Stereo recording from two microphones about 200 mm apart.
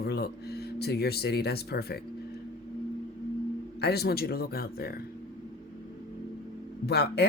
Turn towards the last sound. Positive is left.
turn(degrees=55)  # may be behind; listen again after turning